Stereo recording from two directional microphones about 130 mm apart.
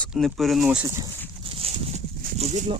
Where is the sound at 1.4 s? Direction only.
45° right (ahead or behind); by 2.7 s 65° right (ahead or behind).